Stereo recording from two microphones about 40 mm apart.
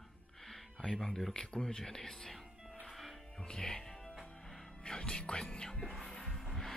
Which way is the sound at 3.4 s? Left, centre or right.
Centre.